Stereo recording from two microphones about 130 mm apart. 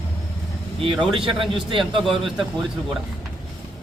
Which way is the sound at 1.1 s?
40° right (ahead or behind).